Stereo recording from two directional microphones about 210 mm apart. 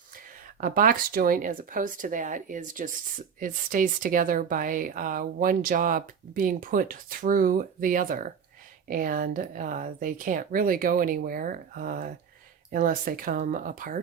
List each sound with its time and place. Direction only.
0.6 s speech: 40° right (ahead or behind)